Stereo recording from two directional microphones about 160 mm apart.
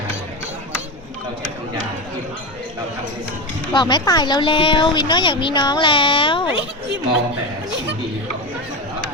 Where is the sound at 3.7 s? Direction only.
25° left (ahead or behind).